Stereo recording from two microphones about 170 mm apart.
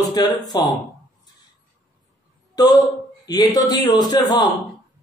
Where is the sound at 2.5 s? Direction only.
20° left (ahead or behind).